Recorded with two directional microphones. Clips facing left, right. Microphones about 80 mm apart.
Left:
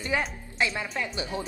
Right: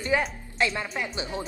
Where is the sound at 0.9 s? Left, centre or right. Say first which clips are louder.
Even; right.